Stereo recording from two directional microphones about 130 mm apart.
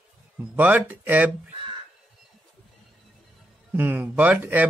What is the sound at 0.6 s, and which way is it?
Speech, 15° right (ahead or behind).